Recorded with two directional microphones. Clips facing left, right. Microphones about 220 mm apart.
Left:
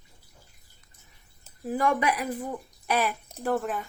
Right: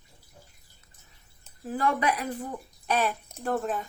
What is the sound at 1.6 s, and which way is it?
Speech, 10° left (ahead or behind).